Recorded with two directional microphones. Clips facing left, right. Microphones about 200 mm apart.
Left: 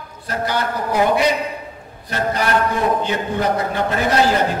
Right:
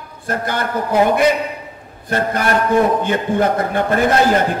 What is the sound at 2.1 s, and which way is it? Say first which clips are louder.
A man's voice: right 2 dB; 50° right (ahead or behind).